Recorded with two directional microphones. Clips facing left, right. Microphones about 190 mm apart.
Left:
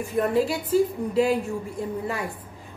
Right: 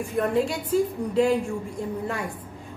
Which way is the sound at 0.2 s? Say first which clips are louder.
Left 1 dB; 5° left (ahead or behind).